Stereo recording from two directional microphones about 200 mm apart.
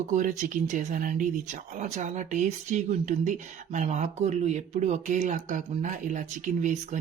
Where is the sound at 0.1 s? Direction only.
40° right (ahead or behind).